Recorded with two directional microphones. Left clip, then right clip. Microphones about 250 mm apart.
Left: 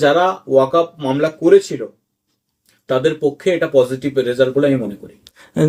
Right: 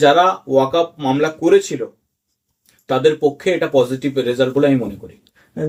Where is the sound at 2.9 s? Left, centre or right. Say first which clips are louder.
Right 1 dB; centre.